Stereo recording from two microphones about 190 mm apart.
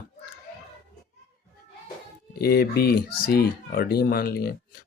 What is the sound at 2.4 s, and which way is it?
A man's voice, 55° left (ahead or behind).